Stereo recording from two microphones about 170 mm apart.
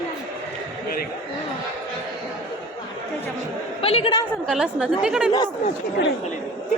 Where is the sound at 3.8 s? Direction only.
35° left (ahead or behind).